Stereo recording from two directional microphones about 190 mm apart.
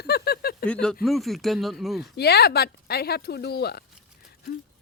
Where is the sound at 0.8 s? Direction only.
Centre (ahead or behind).